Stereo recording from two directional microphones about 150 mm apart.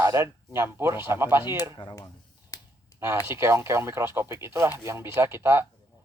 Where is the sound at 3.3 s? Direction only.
15° right (ahead or behind).